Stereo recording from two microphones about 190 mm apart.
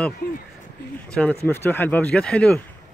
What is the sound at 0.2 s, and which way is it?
Speech, 50° left (ahead or behind).